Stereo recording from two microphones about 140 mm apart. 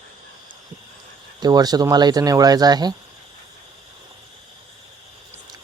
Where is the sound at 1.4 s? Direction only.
30° right (ahead or behind).